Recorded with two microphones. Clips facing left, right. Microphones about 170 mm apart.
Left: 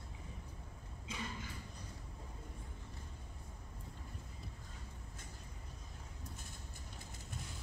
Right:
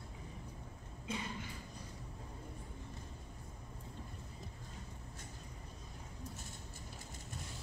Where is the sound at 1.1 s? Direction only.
55° right (ahead or behind).